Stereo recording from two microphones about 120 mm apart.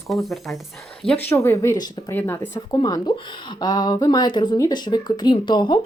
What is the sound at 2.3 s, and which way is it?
Speech, 30° left (ahead or behind).